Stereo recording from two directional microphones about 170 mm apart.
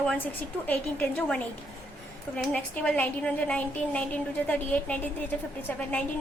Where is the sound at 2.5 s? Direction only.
10° left (ahead or behind).